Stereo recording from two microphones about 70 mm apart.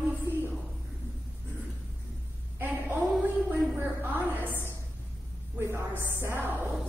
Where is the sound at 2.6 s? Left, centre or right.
Right.